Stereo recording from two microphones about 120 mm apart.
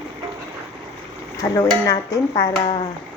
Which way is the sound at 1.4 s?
30° left (ahead or behind).